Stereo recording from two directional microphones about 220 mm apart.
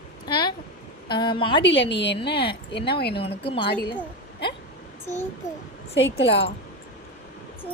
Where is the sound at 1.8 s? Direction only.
50° left (ahead or behind).